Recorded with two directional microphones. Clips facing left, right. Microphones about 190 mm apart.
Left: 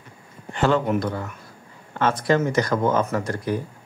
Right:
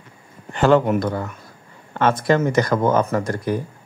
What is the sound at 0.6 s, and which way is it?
Speech, 50° right (ahead or behind).